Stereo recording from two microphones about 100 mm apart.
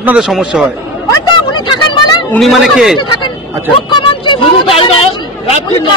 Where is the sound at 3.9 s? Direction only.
55° left (ahead or behind).